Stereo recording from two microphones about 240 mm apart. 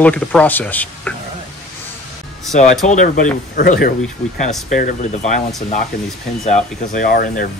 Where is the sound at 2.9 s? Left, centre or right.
Left.